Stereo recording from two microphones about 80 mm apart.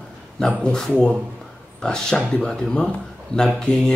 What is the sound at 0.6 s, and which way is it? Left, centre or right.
Speech, centre.